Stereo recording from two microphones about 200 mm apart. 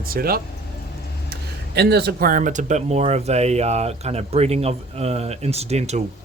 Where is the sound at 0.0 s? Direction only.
50° right (ahead or behind).